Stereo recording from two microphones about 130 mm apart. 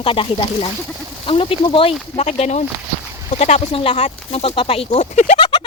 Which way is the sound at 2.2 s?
55° left (ahead or behind).